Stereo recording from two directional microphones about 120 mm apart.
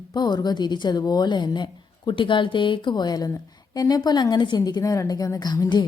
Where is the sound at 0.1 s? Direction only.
35° left (ahead or behind).